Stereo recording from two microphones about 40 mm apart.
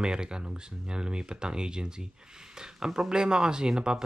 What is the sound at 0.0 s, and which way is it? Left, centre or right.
Speech, centre.